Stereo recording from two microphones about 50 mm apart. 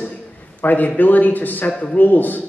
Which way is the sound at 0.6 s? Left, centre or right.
Left.